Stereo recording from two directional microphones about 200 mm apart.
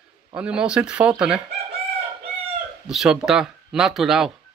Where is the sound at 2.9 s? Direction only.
Centre (ahead or behind).